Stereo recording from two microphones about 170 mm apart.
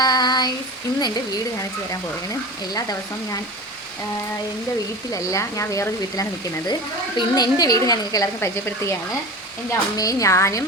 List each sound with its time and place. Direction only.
0.0 s child singing: 25° left (ahead or behind)
5.1 s speech: 20° left (ahead or behind)